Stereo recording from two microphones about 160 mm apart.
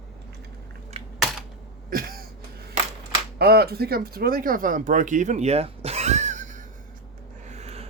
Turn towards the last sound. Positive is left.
turn(degrees=-40)  # may be behind; listen again after turning